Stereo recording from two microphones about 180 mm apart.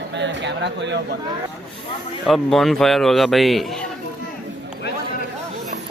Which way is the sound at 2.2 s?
Centre (ahead or behind).